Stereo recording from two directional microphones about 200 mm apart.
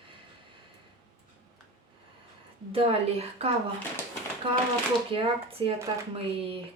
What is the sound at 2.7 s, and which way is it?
Speech, 30° right (ahead or behind).